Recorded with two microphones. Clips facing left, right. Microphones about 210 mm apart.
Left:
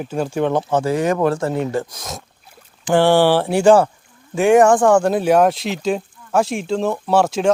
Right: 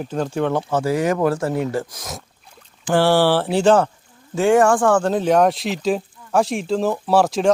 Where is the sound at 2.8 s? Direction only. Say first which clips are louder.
Left 2 dB; 15° left (ahead or behind); by 7.5 s centre (ahead or behind).